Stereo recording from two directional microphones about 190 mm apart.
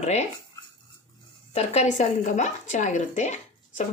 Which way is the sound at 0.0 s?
35° left (ahead or behind).